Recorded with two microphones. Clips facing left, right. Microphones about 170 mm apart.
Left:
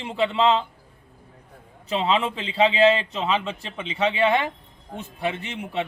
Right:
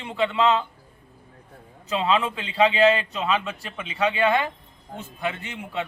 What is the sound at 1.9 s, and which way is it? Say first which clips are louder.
A man's voice: even; 25° left (ahead or behind).